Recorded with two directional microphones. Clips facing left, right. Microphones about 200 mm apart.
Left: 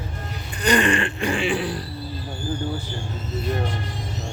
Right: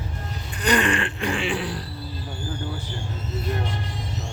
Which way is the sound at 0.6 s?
5° right (ahead or behind).